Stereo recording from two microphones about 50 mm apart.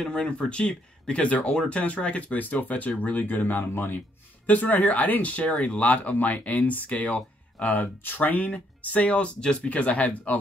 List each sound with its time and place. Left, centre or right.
0.0 s speech: left
4.6 s speech: left